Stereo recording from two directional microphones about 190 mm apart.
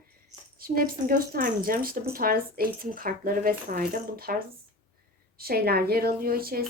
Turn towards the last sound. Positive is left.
turn(degrees=-50)  # may be behind; listen again after turning